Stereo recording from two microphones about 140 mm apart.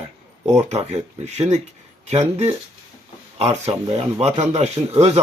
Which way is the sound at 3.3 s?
50° right (ahead or behind).